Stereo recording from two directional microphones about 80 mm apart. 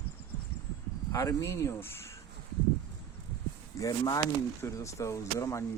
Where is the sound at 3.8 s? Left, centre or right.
Left.